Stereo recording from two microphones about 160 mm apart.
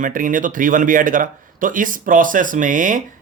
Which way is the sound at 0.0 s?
55° right (ahead or behind).